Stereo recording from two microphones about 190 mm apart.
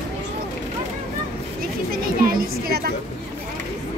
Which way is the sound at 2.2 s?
50° right (ahead or behind).